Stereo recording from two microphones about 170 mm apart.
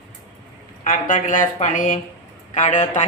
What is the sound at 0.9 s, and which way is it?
A woman's voice, 50° left (ahead or behind).